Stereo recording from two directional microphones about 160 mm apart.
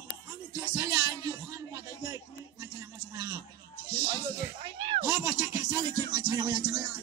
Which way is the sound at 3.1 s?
25° right (ahead or behind).